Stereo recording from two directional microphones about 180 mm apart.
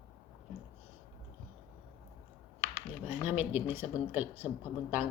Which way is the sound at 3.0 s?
10° right (ahead or behind).